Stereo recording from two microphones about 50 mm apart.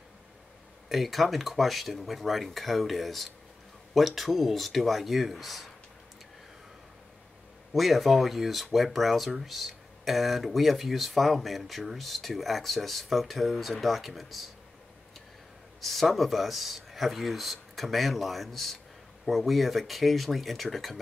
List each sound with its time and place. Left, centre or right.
0.8 s speech: centre
7.7 s speech: centre
15.8 s speech: centre